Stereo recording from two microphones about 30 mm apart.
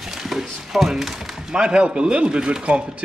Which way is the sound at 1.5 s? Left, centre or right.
Right.